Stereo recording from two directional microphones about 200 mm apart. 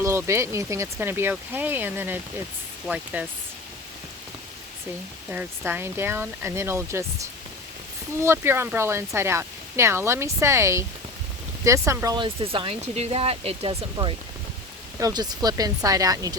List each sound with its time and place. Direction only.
0.0 s speech: 15° right (ahead or behind)
5.3 s speech: 10° right (ahead or behind)